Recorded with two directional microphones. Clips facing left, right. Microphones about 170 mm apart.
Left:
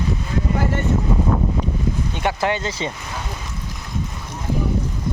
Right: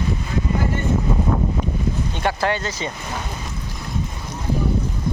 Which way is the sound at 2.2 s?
20° left (ahead or behind).